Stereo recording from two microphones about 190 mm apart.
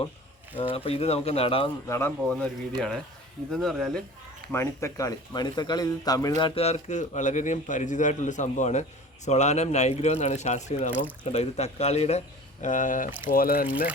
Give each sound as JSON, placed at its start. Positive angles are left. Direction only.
{"t": 0.5, "sound": "a man's voice", "side_deg": 30}
{"t": 1.9, "sound": "speech", "side_deg": 10}
{"t": 4.5, "sound": "speech", "side_deg": 15}
{"t": 6.4, "sound": "a man's voice", "side_deg": 35}